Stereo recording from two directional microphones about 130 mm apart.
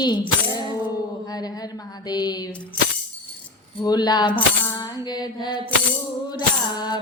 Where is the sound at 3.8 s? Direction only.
30° left (ahead or behind).